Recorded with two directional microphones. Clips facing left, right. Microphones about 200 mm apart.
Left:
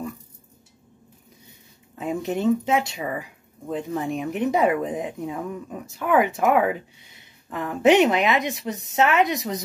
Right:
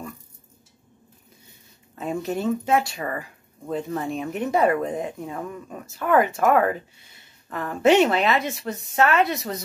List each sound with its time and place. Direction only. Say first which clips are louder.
2.0 s speech: left 1 dB; 15° left (ahead or behind)